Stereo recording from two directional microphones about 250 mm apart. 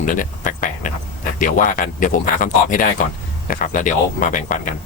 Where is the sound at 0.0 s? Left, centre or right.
Left.